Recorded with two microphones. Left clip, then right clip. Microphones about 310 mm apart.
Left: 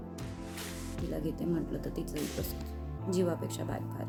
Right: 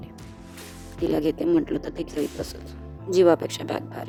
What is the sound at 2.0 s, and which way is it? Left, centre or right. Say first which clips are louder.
Speech: right 9 dB; right.